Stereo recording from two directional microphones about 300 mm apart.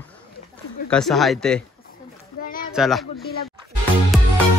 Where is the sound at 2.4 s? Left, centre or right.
Left.